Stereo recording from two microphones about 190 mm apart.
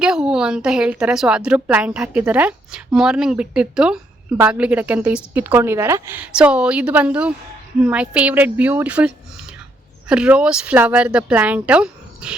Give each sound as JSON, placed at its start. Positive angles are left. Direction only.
{"t": 0.0, "sound": "a woman's voice", "side_deg": -5}